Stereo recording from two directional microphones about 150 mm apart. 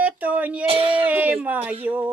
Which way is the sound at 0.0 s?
10° right (ahead or behind).